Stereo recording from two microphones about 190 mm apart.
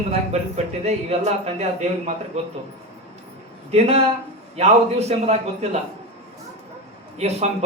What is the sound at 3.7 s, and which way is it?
A man's voice, 35° right (ahead or behind).